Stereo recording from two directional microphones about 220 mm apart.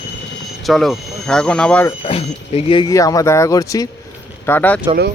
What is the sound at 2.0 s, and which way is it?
Speech, 25° left (ahead or behind).